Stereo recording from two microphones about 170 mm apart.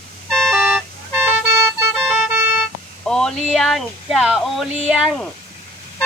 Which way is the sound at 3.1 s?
5° left (ahead or behind).